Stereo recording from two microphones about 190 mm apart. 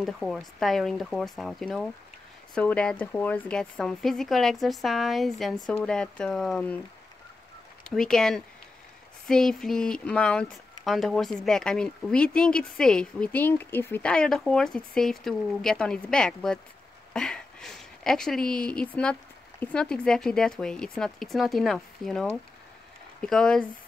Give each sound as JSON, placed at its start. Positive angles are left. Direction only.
{"t": 0.0, "sound": "speech", "side_deg": 0}
{"t": 7.9, "sound": "speech", "side_deg": 5}